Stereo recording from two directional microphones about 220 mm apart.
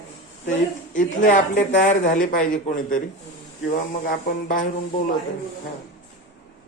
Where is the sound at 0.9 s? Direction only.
35° left (ahead or behind).